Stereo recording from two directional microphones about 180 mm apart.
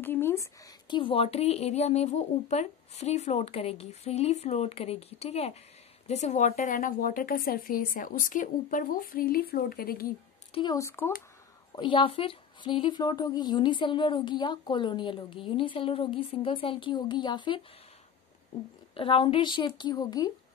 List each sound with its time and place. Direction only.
0.0 s a woman's voice: 10° left (ahead or behind); by 10.1 s 55° left (ahead or behind)
10.5 s speech: 20° left (ahead or behind)
11.7 s a woman's voice: 25° left (ahead or behind)
18.9 s a woman's voice: 30° left (ahead or behind)